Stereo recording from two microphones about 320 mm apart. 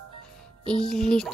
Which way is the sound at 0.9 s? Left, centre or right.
Centre.